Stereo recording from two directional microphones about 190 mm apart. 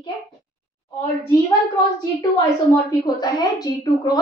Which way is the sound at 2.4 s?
20° left (ahead or behind).